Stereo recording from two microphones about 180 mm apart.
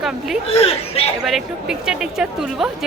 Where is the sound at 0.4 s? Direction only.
35° left (ahead or behind).